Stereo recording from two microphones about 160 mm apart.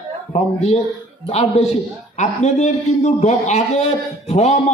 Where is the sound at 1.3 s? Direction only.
45° left (ahead or behind).